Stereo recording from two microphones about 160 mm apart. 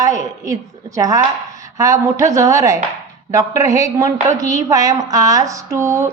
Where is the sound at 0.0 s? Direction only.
20° right (ahead or behind).